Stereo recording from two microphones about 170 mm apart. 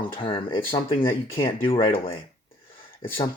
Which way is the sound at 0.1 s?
30° left (ahead or behind).